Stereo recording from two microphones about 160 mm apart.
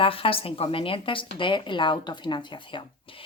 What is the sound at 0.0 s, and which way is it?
Speech, 35° left (ahead or behind).